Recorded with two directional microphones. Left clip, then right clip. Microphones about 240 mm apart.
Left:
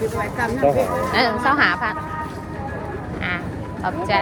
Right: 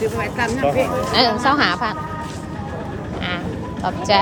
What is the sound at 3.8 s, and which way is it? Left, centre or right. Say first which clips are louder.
Speech: right 3 dB; centre.